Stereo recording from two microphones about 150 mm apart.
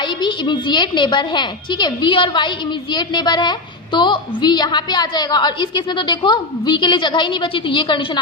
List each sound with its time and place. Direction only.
0.2 s a woman's voice: 30° left (ahead or behind)